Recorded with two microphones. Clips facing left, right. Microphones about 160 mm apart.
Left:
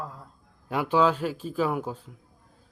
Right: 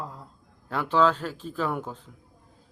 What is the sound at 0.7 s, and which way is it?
Speech, 10° left (ahead or behind).